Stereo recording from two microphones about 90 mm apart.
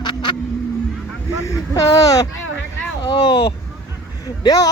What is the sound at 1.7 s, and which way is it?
Speech, 40° left (ahead or behind).